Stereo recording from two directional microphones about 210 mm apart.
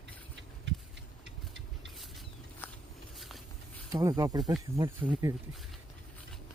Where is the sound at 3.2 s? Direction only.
Centre (ahead or behind).